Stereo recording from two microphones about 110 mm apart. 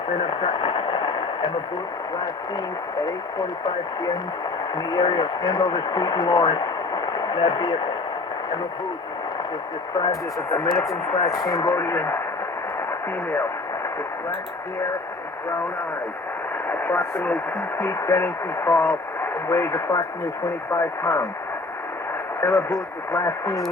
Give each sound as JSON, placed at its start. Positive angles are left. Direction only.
{"t": 0.2, "sound": "radio", "side_deg": 50}
{"t": 3.0, "sound": "speech", "side_deg": 40}
{"t": 9.9, "sound": "speech", "side_deg": 35}
{"t": 10.7, "sound": "speech", "side_deg": 0}
{"t": 11.5, "sound": "speech", "side_deg": 35}
{"t": 16.6, "sound": "speech", "side_deg": 30}
{"t": 22.4, "sound": "speech", "side_deg": 30}